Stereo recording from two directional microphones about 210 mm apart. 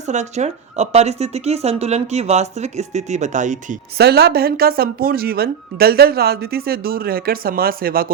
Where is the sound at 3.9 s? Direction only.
50° right (ahead or behind).